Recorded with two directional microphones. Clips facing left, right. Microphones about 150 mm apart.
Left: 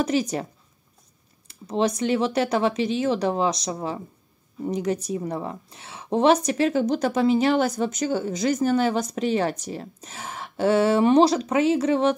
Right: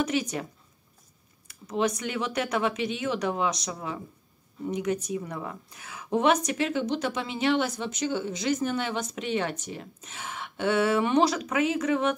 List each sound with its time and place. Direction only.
0.0 s a woman's voice: 35° left (ahead or behind)
1.5 s a woman's voice: 30° left (ahead or behind)